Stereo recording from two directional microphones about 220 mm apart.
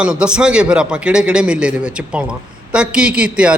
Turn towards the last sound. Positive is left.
turn(degrees=-5)  # may be behind; listen again after turning